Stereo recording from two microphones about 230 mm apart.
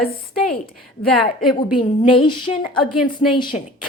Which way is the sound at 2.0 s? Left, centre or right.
Left.